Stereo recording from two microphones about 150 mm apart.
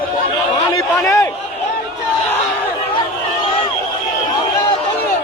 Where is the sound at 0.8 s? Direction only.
20° left (ahead or behind).